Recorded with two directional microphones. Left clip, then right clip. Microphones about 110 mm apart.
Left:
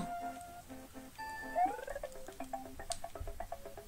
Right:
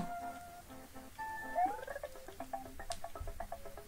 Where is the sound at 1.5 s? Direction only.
35° left (ahead or behind).